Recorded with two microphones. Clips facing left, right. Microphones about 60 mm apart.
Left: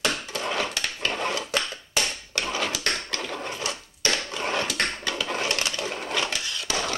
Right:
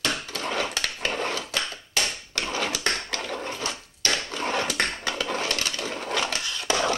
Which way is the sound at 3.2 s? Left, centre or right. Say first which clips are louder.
Right 1 dB; centre.